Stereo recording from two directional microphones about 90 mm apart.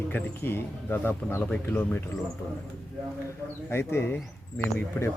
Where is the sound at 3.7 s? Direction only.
30° left (ahead or behind).